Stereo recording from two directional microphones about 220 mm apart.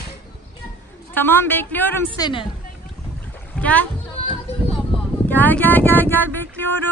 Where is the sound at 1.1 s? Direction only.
10° left (ahead or behind).